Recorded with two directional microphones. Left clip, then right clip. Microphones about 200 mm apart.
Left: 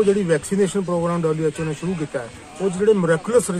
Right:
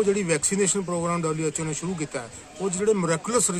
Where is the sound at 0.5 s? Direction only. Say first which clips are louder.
Left 5 dB; 20° right (ahead or behind).